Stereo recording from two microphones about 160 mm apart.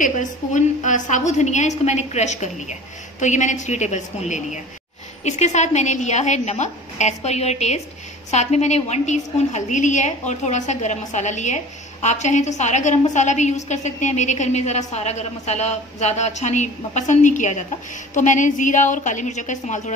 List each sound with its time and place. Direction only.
0.0 s a woman's voice: 50° left (ahead or behind)